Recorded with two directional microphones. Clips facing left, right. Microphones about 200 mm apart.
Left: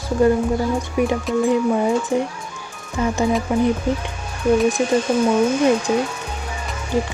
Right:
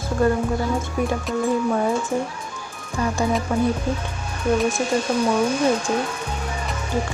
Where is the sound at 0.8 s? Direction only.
15° left (ahead or behind).